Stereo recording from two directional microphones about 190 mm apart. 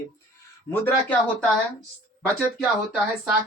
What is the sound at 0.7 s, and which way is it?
Speech, 10° left (ahead or behind).